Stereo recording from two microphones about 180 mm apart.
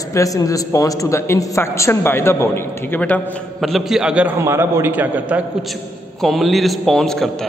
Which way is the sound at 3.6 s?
Centre (ahead or behind).